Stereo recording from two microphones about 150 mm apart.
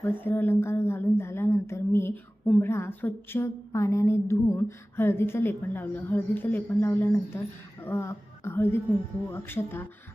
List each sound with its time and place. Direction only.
0.0 s a woman's voice: 15° left (ahead or behind)